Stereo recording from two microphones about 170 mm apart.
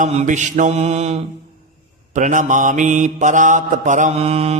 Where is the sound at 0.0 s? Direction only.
40° right (ahead or behind).